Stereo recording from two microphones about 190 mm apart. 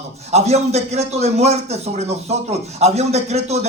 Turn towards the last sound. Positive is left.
turn(degrees=-35)  # may be behind; listen again after turning